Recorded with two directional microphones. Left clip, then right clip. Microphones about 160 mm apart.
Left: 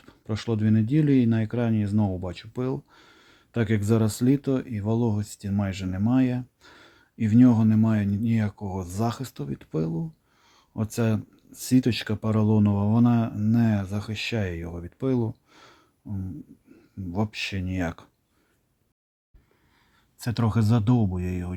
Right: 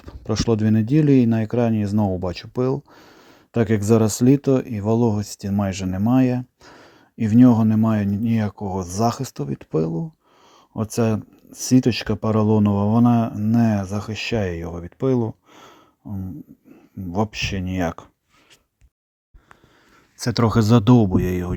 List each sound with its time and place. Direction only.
0.0 s speech: 40° right (ahead or behind)
20.1 s speech: 45° right (ahead or behind)